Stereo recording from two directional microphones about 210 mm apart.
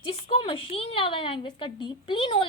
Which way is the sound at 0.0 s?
25° left (ahead or behind).